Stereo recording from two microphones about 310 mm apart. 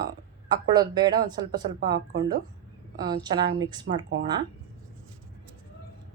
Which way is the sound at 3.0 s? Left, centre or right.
Centre.